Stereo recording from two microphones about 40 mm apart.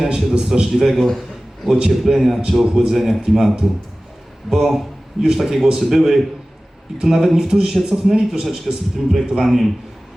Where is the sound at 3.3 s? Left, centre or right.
Centre.